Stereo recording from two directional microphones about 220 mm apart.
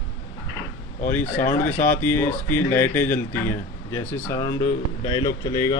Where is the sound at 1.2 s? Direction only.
35° left (ahead or behind).